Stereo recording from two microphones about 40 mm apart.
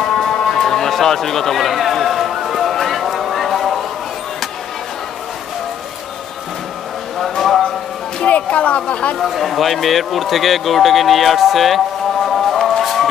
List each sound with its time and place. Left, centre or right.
0.0 s run: centre
7.2 s a sound: centre
8.3 s speech: left
9.2 s speech: centre
12.8 s music: centre